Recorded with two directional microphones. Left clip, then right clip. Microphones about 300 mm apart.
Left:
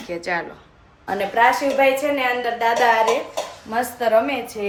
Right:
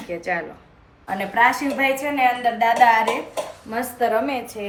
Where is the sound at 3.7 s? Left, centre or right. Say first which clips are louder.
Left 3 dB; centre.